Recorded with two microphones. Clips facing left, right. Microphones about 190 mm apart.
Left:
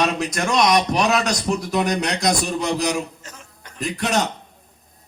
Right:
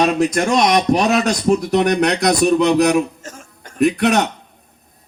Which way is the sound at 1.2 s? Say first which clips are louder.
Right 6 dB; 60° right (ahead or behind).